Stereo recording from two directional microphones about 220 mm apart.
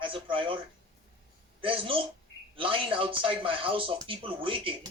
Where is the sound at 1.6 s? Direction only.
25° right (ahead or behind).